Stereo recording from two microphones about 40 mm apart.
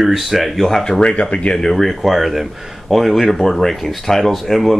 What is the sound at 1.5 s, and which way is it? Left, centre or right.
Speech, centre.